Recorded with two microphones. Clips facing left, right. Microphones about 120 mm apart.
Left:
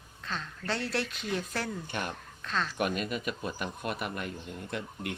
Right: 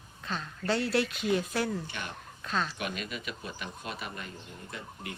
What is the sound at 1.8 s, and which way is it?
Speech, 50° left (ahead or behind).